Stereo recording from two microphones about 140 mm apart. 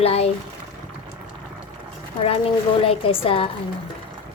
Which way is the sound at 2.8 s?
40° left (ahead or behind).